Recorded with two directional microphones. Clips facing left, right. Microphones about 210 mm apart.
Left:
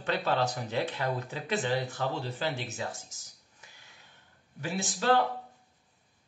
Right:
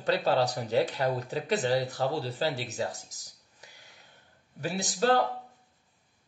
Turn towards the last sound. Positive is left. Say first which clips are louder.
# right 1 dB
turn(degrees=-40)  # may be behind; listen again after turning